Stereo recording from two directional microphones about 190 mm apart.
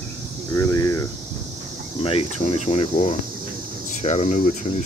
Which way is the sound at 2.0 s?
30° left (ahead or behind).